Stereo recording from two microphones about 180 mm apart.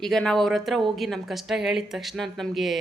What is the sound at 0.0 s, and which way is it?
Speech, 5° left (ahead or behind).